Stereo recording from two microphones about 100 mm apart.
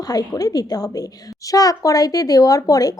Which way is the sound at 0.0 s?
40° left (ahead or behind).